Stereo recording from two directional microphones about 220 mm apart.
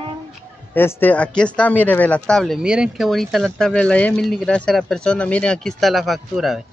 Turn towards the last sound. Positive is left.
turn(degrees=0)  # may be behind; listen again after turning